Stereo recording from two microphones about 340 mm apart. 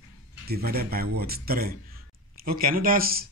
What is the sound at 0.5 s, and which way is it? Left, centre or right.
Speech, right.